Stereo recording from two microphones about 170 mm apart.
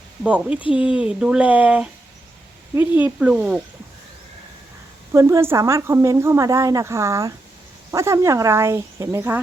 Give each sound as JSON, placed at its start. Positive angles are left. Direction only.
{"t": 0.2, "sound": "speech", "side_deg": -5}
{"t": 5.1, "sound": "speech", "side_deg": -15}